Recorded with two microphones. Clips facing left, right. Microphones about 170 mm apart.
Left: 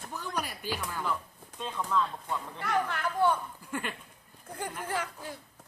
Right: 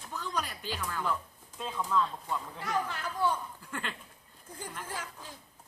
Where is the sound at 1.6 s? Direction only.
Centre (ahead or behind).